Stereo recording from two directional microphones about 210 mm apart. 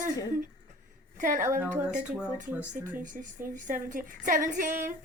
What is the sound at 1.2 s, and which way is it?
Speech, 40° right (ahead or behind).